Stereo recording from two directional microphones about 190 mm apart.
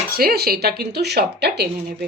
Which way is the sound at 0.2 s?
55° right (ahead or behind).